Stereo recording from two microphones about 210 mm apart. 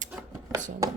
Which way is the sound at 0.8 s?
15° right (ahead or behind).